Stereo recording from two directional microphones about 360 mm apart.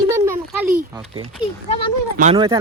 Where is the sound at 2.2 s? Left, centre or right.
Centre.